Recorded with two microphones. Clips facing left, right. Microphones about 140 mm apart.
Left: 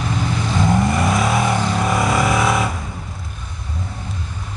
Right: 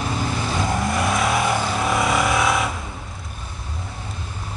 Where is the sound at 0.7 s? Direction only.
Centre (ahead or behind).